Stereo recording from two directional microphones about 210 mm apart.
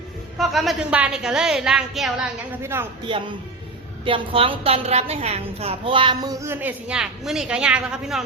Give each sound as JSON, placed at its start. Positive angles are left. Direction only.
{"t": 0.3, "sound": "a woman's voice", "side_deg": 0}
{"t": 3.1, "sound": "a woman's voice", "side_deg": -20}